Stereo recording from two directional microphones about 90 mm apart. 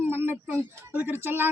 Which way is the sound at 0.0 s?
25° right (ahead or behind).